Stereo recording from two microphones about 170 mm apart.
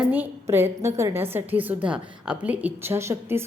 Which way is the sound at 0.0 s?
10° right (ahead or behind).